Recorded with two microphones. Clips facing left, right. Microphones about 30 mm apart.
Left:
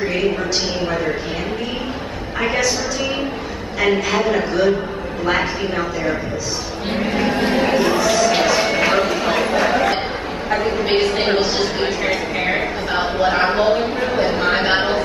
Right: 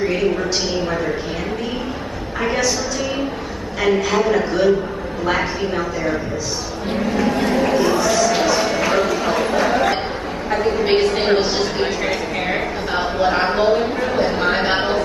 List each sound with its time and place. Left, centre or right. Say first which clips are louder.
2.4 s a woman's voice: left 1 dB; centre
3.8 s a man's voice: even; centre
7.0 s speech: even; left; by 8.3 s centre
8.5 s a sound: left 1 dB; left; by 9.9 s centre
10.5 s a man's voice: right 1 dB; centre
11.1 s a sound: right 1 dB; centre